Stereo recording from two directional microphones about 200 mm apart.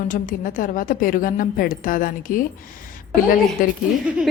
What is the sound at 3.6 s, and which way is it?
Speech, 45° left (ahead or behind).